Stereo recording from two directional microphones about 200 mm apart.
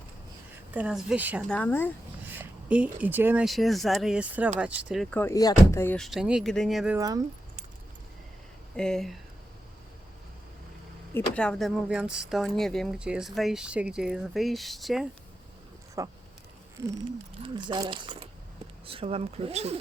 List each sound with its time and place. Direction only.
0.7 s speech: 5° right (ahead or behind)
1.5 s speech: 5° left (ahead or behind)
2.4 s speech: 5° right (ahead or behind)
5.1 s speech: 15° left (ahead or behind); by 7.0 s 5° right (ahead or behind)
8.7 s speech: 5° left (ahead or behind)
11.1 s speech: 5° left (ahead or behind)
16.0 s speech: 15° right (ahead or behind); by 19.8 s 30° right (ahead or behind)